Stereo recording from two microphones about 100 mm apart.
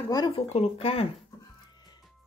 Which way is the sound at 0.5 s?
90° left.